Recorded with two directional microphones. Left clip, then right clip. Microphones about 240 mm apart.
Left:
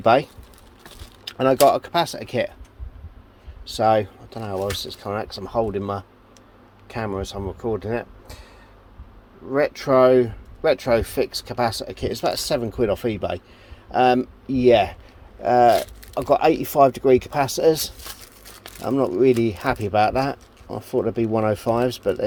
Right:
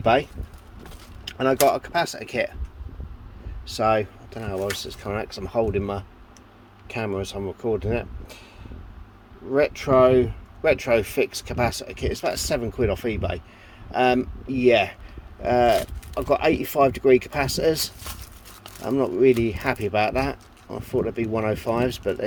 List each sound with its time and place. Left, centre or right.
0.0 s speech: centre
1.4 s speech: centre
3.7 s speech: centre
7.9 s vehicle: centre
9.5 s speech: centre